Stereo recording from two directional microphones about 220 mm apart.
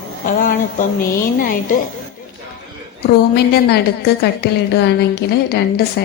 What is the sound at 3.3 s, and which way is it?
A woman's voice, 45° left (ahead or behind).